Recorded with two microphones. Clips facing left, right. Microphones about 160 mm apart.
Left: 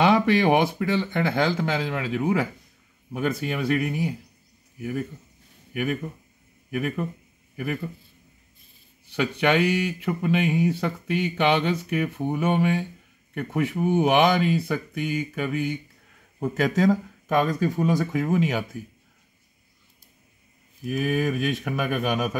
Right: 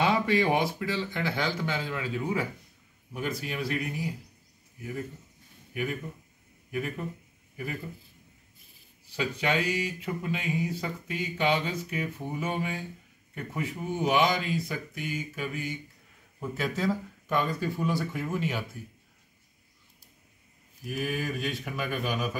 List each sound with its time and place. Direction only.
0.0 s speech: 80° left
3.1 s speech: 65° left (ahead or behind)
5.7 s a man's voice: 70° left (ahead or behind)
9.1 s speech: 75° left (ahead or behind)
16.3 s speech: 80° left
21.0 s speech: 55° left (ahead or behind)